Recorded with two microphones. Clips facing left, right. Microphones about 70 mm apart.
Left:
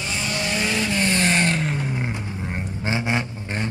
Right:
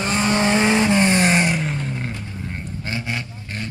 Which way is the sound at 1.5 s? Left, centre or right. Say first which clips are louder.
Even; centre.